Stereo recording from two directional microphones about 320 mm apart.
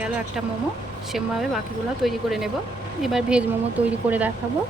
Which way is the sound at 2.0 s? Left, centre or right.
Centre.